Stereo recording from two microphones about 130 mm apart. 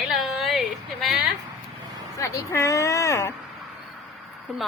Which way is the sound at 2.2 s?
25° left (ahead or behind).